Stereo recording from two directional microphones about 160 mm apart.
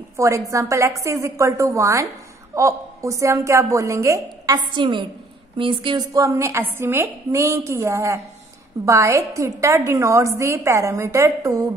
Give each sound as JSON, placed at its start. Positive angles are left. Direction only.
{"t": 0.5, "sound": "a woman's voice", "side_deg": -20}